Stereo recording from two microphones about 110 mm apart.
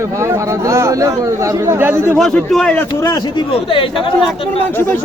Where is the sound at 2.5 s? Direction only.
5° left (ahead or behind).